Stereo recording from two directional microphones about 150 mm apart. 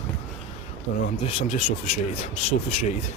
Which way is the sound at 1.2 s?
50° left (ahead or behind).